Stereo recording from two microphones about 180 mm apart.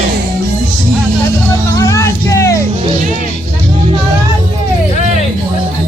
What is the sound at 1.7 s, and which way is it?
Music, 15° left (ahead or behind).